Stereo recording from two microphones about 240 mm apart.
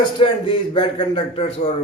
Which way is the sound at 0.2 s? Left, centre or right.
Left.